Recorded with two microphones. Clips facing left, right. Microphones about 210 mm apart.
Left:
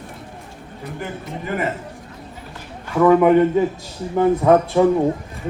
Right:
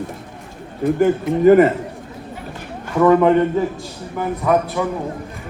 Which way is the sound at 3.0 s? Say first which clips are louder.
Even; 5° left (ahead or behind).